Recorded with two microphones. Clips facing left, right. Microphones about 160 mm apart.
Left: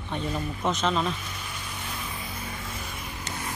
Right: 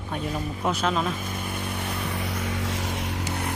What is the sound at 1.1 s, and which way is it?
Vehicle, 50° right (ahead or behind).